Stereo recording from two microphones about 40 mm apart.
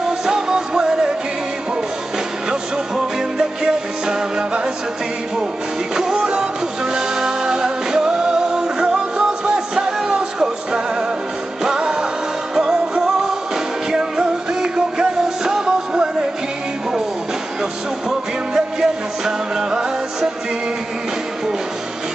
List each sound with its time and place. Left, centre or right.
0.2 s music: centre
3.2 s music: centre
5.9 s music: centre
18.5 s music: centre